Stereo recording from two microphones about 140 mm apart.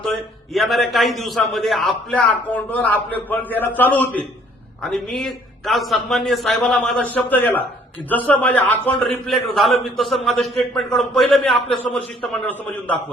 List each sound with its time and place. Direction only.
0.0 s a man's voice: centre (ahead or behind)
7.0 s a man's voice: 10° left (ahead or behind)